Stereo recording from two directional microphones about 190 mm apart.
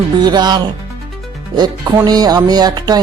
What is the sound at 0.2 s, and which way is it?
Speech, 20° right (ahead or behind).